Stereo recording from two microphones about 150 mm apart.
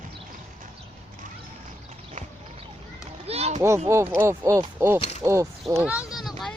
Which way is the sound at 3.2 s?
45° right (ahead or behind).